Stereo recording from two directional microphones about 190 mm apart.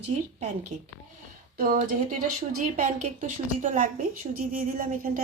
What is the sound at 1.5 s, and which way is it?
A woman's voice, 45° right (ahead or behind).